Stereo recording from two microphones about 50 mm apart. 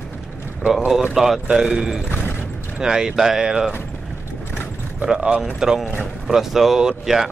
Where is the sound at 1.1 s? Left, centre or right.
Centre.